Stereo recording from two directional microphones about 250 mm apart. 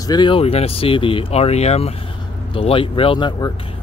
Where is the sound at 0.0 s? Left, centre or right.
Centre.